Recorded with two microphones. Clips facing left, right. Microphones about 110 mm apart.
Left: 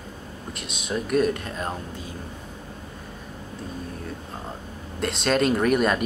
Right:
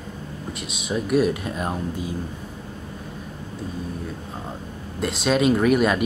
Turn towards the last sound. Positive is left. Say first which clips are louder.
# right 2 dB
turn(degrees=-5)  # may be behind; listen again after turning